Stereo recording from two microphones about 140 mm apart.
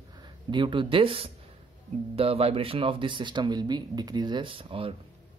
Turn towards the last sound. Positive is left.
turn(degrees=-40)  # may be behind; listen again after turning